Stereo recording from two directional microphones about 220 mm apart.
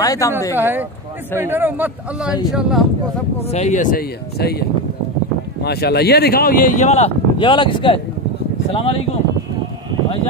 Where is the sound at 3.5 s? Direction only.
30° left (ahead or behind).